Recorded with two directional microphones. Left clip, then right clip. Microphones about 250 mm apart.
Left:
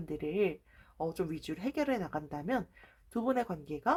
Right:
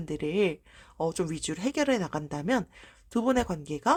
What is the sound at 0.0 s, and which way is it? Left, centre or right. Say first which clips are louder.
Speech: right 5 dB; right.